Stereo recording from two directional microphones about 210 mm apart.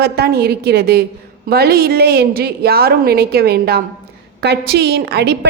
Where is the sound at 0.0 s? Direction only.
50° right (ahead or behind).